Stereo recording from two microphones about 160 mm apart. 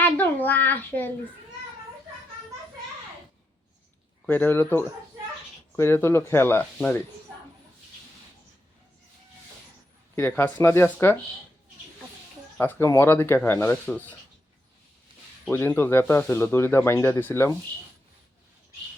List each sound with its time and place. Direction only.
0.0 s a child's voice: 10° left (ahead or behind)
4.3 s speech: 10° left (ahead or behind)
10.2 s speech: 15° left (ahead or behind)
12.5 s speech: 15° left (ahead or behind)
15.4 s speech: 15° left (ahead or behind)